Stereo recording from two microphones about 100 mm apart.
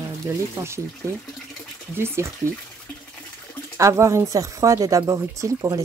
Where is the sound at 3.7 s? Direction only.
30° right (ahead or behind).